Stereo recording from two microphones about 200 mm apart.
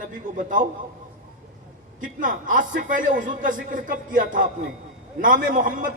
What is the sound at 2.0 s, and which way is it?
Speech, 40° right (ahead or behind).